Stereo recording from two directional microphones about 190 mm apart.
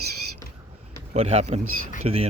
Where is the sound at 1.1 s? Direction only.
30° right (ahead or behind).